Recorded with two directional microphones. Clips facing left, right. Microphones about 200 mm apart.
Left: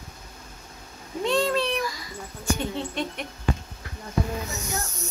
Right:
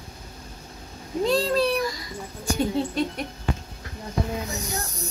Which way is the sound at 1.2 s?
35° right (ahead or behind).